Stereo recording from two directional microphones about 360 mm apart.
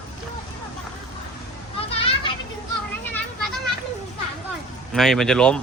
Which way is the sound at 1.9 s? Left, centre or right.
Centre.